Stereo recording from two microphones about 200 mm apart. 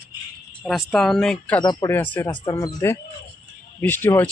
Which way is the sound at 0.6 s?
Centre (ahead or behind).